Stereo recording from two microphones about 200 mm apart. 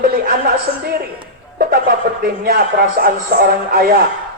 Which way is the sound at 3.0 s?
50° right (ahead or behind).